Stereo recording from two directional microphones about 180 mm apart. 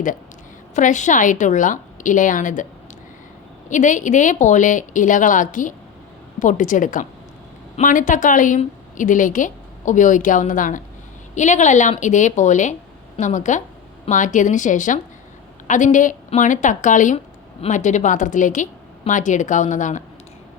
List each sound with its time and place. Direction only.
0.8 s a woman's voice: 45° left (ahead or behind)
3.7 s a woman's voice: 45° left (ahead or behind)